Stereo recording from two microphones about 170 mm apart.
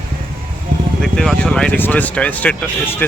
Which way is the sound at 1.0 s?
5° left (ahead or behind).